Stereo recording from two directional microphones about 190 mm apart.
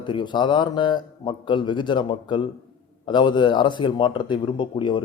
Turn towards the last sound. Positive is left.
turn(degrees=25)  # may be behind; listen again after turning